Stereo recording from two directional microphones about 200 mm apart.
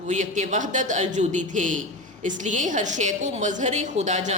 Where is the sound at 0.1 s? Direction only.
35° right (ahead or behind).